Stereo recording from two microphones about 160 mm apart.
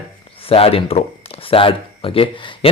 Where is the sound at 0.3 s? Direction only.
35° left (ahead or behind).